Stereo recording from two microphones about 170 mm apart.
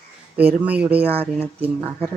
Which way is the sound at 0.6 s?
10° right (ahead or behind).